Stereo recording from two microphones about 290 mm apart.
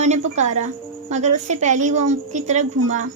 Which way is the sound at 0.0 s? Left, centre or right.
Right.